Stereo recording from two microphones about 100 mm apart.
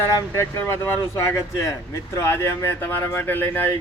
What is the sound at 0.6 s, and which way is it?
Speech, 20° left (ahead or behind).